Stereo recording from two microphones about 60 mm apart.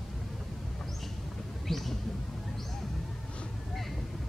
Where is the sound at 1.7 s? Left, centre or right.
Centre.